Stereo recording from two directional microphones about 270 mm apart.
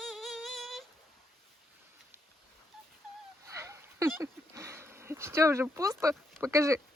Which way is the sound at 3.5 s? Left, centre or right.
Centre.